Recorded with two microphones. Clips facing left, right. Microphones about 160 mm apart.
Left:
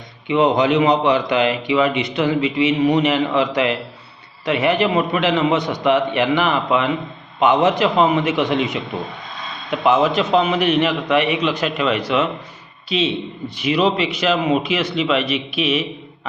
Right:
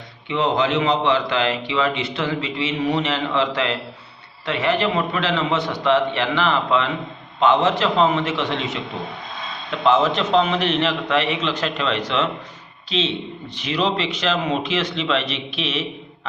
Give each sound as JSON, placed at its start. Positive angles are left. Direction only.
{"t": 0.3, "sound": "a man's voice", "side_deg": 15}
{"t": 9.8, "sound": "a man's voice", "side_deg": 10}